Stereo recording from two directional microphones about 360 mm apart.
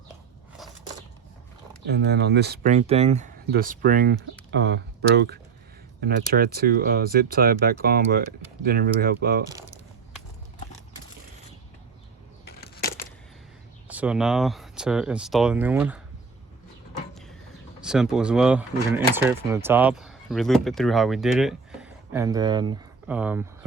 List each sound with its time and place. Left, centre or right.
1.9 s speech: right
12.5 s a sound: left
13.8 s speech: centre
17.8 s speech: centre